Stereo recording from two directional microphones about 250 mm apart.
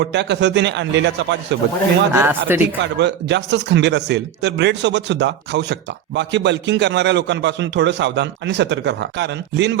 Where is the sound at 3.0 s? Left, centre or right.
Right.